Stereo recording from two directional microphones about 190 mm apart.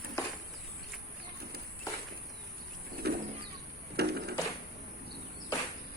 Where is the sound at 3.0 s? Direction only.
55° right (ahead or behind).